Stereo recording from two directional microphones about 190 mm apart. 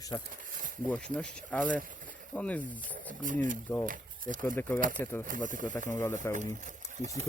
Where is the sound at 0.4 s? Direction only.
45° right (ahead or behind).